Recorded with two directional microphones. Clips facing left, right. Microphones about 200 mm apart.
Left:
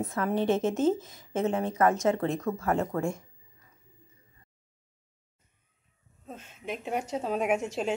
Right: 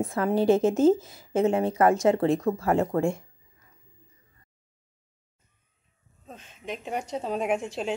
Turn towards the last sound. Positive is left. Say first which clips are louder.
# even
turn(degrees=5)  # may be behind; listen again after turning